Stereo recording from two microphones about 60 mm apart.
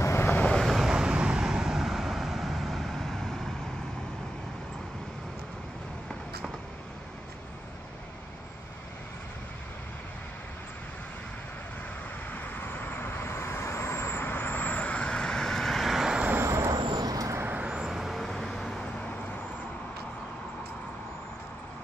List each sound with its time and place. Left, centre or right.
0.0 s vehicle: left
0.5 s vehicle: centre
12.3 s vehicle: left; by 16.2 s centre
16.3 s vehicle: right
16.7 s vehicle: right
17.6 s vehicle: centre
19.0 s vehicle: left